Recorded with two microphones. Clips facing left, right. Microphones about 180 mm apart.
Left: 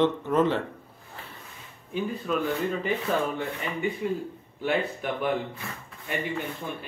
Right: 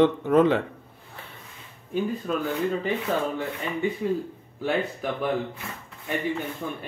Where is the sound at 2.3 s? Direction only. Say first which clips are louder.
Left 3 dB; 40° right (ahead or behind).